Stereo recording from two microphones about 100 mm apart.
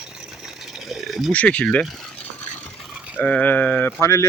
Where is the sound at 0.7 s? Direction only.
Centre (ahead or behind).